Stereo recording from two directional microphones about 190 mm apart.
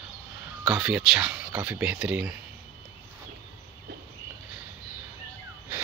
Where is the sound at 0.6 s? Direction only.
5° right (ahead or behind).